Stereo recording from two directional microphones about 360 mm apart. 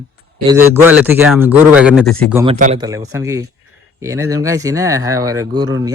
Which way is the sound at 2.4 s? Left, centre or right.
Centre.